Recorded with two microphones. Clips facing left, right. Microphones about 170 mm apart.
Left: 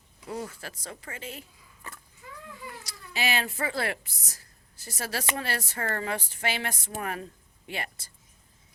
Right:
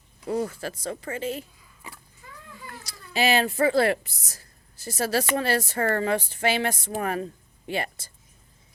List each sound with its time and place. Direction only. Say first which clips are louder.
0.3 s speech: right 8 dB; 35° right (ahead or behind)
1.8 s a sound: right 1 dB; 10° right (ahead or behind)
3.1 s a woman's voice: right 7 dB; 35° right (ahead or behind)